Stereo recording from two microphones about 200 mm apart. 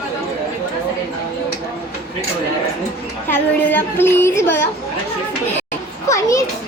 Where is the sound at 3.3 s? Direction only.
10° left (ahead or behind).